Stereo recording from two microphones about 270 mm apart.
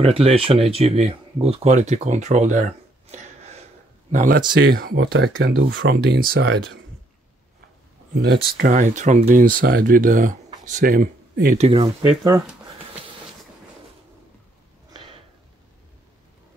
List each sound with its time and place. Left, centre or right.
0.0 s speech: right
3.1 s a sound: right
4.1 s speech: right
8.1 s speech: right; by 12.4 s centre
14.9 s sniff: centre